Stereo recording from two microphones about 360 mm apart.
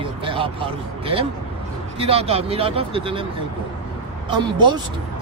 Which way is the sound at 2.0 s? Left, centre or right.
Centre.